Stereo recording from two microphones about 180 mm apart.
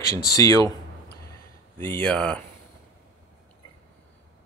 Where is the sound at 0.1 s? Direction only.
20° left (ahead or behind).